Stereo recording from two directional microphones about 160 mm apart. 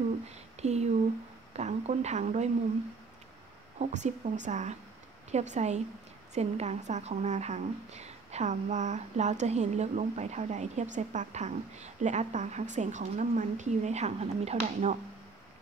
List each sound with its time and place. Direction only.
0.3 s a woman's voice: 45° right (ahead or behind)
3.8 s a woman's voice: 50° right (ahead or behind)